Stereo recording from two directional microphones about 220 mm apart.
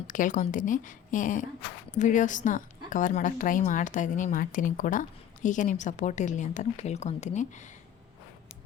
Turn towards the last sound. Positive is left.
turn(degrees=35)  # may be behind; listen again after turning